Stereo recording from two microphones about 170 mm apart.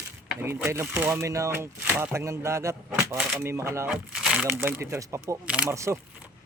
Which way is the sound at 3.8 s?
5° right (ahead or behind).